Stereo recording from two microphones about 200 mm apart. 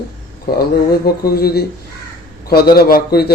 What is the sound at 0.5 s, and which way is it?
Speech, 50° left (ahead or behind).